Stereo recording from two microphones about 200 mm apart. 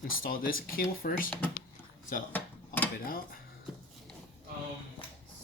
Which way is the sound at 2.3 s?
10° left (ahead or behind).